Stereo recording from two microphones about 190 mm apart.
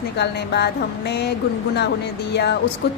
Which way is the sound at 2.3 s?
60° left (ahead or behind).